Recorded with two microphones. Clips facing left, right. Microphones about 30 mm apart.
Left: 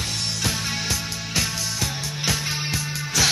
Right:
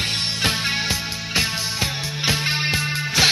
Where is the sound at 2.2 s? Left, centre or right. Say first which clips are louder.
Right 5 dB; right.